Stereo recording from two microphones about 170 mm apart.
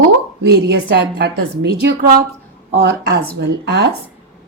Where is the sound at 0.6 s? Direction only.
75° right (ahead or behind).